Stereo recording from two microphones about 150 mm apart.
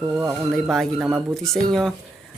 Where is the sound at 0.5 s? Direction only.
Centre (ahead or behind).